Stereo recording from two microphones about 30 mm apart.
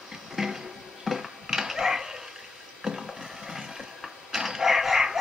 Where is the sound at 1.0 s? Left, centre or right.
Centre.